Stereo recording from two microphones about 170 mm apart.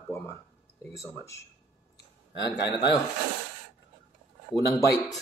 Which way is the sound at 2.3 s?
85° left.